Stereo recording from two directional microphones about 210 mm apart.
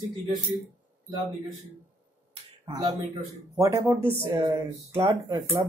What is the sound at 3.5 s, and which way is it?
Speech, 15° right (ahead or behind).